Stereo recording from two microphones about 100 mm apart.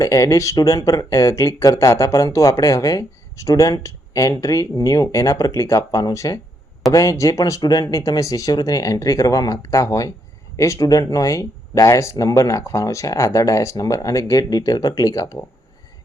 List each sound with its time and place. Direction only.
0.0 s speech: 35° left (ahead or behind)